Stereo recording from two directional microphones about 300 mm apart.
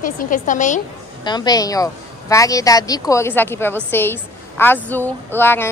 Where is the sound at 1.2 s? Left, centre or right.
Centre.